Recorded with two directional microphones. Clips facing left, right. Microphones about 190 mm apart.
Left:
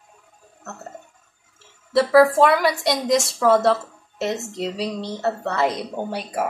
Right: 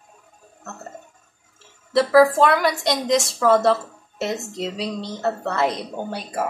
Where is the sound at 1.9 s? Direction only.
Centre (ahead or behind).